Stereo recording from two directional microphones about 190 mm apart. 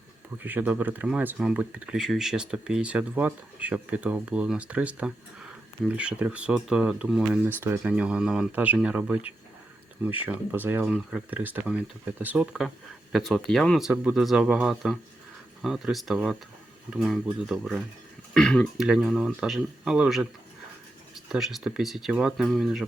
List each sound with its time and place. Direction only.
0.4 s speech: 10° right (ahead or behind)
21.2 s speech: centre (ahead or behind)